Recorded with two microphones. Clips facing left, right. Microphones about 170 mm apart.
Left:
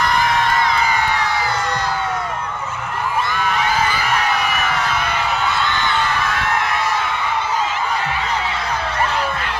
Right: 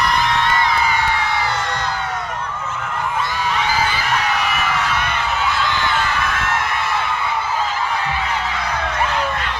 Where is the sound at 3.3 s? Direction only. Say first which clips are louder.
Left 2 dB; 50° left (ahead or behind).